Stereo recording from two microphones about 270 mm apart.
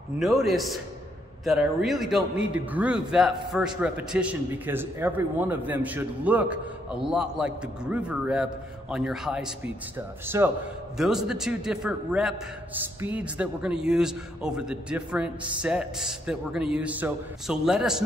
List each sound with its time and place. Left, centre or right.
0.2 s a man's voice: centre